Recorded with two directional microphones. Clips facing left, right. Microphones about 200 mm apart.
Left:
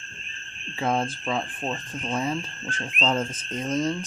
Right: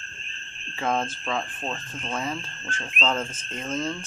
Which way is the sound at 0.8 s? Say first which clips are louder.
Left 1 dB; 10° left (ahead or behind).